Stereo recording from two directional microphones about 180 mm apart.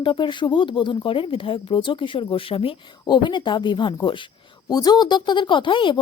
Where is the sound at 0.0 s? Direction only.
25° left (ahead or behind).